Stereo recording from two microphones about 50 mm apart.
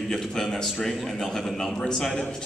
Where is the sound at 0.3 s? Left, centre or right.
Centre.